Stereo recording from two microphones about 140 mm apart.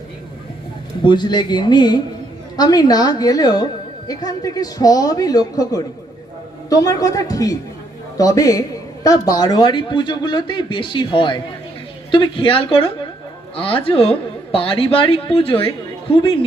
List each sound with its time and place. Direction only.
1.0 s a man's voice: 30° left (ahead or behind)